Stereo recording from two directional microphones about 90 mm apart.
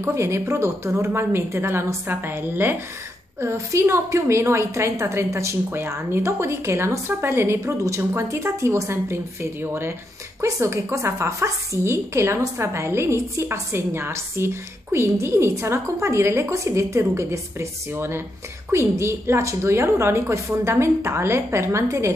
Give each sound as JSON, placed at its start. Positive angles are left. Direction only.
{"t": 0.0, "sound": "a woman's voice", "side_deg": -30}